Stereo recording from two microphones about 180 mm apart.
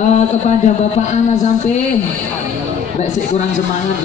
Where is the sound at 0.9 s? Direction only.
40° left (ahead or behind).